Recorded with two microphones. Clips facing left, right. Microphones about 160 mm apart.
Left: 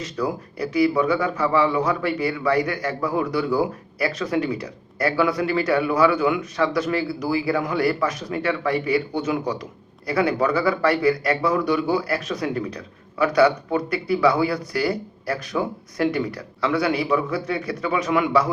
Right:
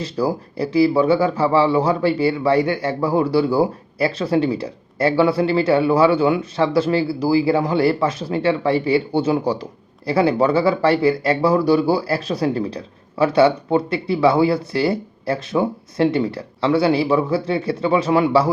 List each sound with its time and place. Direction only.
0.0 s speech: 30° right (ahead or behind)